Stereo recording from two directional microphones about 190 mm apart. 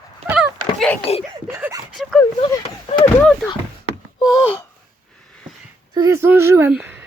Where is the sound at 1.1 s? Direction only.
30° left (ahead or behind).